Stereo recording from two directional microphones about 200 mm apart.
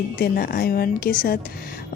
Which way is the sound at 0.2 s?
50° left (ahead or behind).